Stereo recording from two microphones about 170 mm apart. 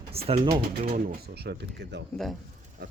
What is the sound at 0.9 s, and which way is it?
Speech, 55° right (ahead or behind).